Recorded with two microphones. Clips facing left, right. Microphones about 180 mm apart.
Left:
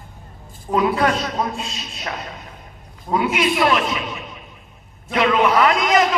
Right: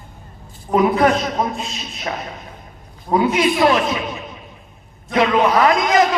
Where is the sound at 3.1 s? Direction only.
30° right (ahead or behind).